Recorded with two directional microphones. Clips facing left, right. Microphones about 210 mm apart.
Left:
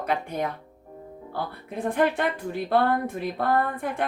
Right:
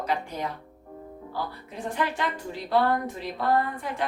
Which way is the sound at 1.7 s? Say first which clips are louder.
Left 6 dB; 55° left (ahead or behind).